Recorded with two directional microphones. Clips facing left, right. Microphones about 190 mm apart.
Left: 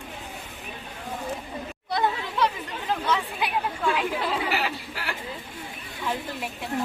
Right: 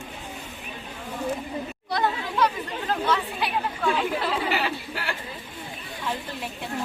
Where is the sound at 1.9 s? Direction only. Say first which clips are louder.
Even; 20° left (ahead or behind).